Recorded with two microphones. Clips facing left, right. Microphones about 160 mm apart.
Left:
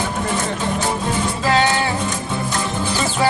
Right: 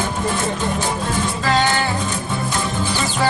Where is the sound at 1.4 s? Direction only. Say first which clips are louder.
Left 1 dB; 5° left (ahead or behind).